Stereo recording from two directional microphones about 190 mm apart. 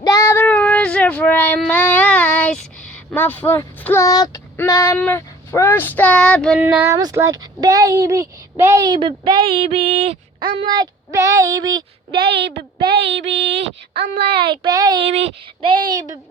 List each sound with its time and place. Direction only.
0.0 s child singing: 15° left (ahead or behind)
6.6 s speech: 10° right (ahead or behind); by 12.3 s 25° right (ahead or behind)
12.3 s a woman's voice: 60° right (ahead or behind)
12.9 s child singing: 65° right (ahead or behind)
14.3 s speech: 25° right (ahead or behind)